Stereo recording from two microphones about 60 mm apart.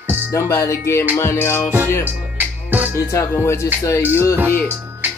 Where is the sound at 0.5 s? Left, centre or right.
Left.